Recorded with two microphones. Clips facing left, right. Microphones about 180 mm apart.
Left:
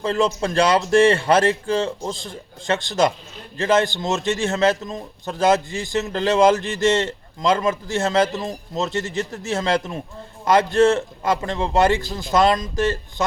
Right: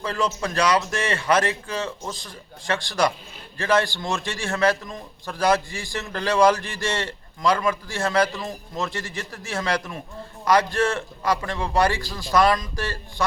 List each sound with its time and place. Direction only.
0.0 s a man's voice: 25° left (ahead or behind)